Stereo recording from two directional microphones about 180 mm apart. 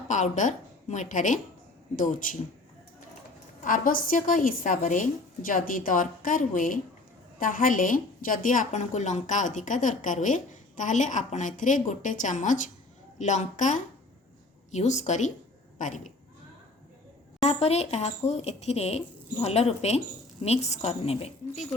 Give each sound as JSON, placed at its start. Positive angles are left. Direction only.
{"t": 0.1, "sound": "a woman's voice", "side_deg": 45}
{"t": 3.6, "sound": "a woman's voice", "side_deg": 50}
{"t": 17.4, "sound": "speech", "side_deg": 35}